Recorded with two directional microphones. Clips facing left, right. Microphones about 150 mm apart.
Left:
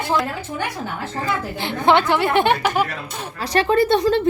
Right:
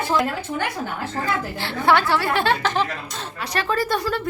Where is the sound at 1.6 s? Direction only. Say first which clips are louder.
Left 3 dB; 20° left (ahead or behind).